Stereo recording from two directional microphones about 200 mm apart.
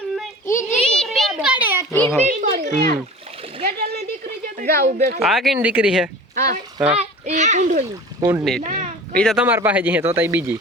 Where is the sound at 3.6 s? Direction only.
50° right (ahead or behind).